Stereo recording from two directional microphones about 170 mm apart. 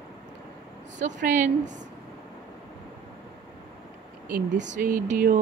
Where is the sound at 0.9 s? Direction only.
45° right (ahead or behind).